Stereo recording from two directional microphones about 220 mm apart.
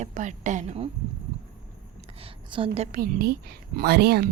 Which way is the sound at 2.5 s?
25° right (ahead or behind).